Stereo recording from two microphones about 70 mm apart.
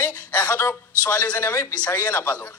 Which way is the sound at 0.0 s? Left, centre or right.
Left.